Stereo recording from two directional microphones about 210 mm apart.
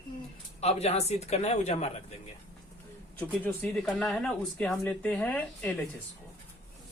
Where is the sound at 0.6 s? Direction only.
30° left (ahead or behind).